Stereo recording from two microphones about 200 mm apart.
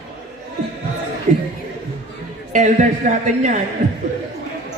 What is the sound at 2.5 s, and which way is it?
Speech, 40° right (ahead or behind).